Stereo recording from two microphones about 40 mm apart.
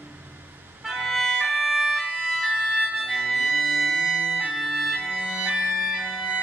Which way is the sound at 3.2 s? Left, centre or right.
Centre.